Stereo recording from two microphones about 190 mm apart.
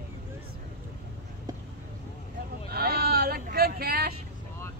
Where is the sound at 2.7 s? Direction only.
55° right (ahead or behind).